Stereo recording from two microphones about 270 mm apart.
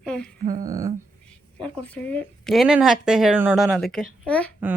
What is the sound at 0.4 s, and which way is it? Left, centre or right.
Speech, right.